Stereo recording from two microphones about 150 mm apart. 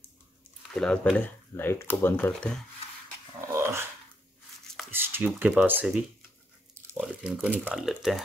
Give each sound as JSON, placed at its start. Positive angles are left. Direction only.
{"t": 0.7, "sound": "speech", "side_deg": 5}
{"t": 3.3, "sound": "dog", "side_deg": -20}
{"t": 4.9, "sound": "speech", "side_deg": -15}